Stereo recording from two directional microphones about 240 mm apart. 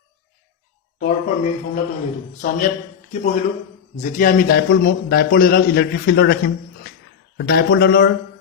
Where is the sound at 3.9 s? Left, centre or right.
Left.